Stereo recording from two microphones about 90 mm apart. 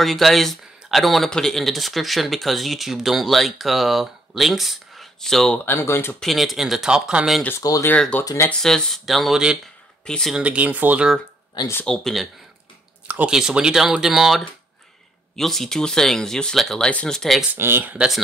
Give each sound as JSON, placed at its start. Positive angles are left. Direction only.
{"t": 0.0, "sound": "speech", "side_deg": 0}
{"t": 5.7, "sound": "speech", "side_deg": 30}
{"t": 6.1, "sound": "speech", "side_deg": 0}
{"t": 7.9, "sound": "speech", "side_deg": 15}
{"t": 10.0, "sound": "speech", "side_deg": 5}
{"t": 10.3, "sound": "speech", "side_deg": -15}
{"t": 11.8, "sound": "speech", "side_deg": 5}
{"t": 13.1, "sound": "speech", "side_deg": -10}
{"t": 17.6, "sound": "speech", "side_deg": -25}
{"t": 17.9, "sound": "speech", "side_deg": -5}